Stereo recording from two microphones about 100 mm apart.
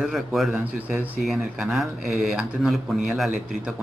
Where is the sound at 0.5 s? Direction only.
20° right (ahead or behind).